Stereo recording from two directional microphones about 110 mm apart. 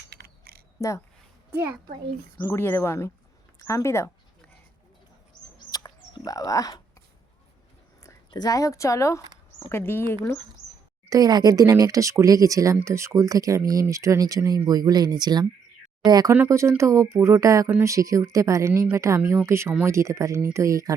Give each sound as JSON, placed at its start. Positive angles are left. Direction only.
{"t": 0.8, "sound": "speech", "side_deg": 30}
{"t": 1.5, "sound": "a child's voice", "side_deg": -20}
{"t": 2.4, "sound": "speech", "side_deg": 20}
{"t": 5.7, "sound": "bird", "side_deg": 35}
{"t": 8.0, "sound": "speech", "side_deg": 35}
{"t": 11.1, "sound": "a woman's voice", "side_deg": -35}
{"t": 16.3, "sound": "a woman's voice", "side_deg": -25}